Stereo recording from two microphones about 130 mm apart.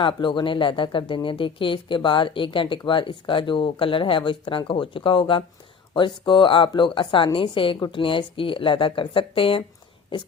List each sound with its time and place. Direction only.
0.0 s speech: 40° left (ahead or behind)